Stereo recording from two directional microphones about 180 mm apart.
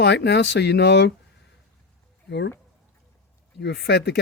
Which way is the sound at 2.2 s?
75° left (ahead or behind).